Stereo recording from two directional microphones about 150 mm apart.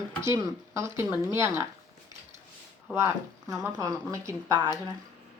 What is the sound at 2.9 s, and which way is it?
Speech, 20° right (ahead or behind).